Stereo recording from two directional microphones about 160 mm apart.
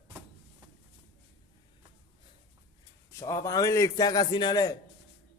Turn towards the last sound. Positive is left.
turn(degrees=20)  # may be behind; listen again after turning